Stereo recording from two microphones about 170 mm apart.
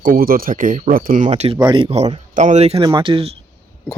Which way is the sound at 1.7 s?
30° right (ahead or behind).